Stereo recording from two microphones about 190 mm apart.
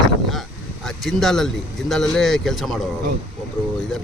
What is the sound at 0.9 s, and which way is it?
Speech, centre (ahead or behind).